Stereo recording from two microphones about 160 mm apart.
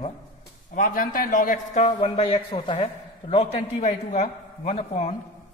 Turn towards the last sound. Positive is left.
turn(degrees=40)  # may be behind; listen again after turning